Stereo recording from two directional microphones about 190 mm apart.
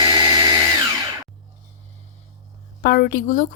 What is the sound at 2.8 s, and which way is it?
Speech, 55° left (ahead or behind).